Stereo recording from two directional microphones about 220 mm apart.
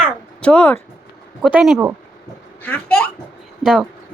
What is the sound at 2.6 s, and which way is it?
A child's voice, 10° left (ahead or behind).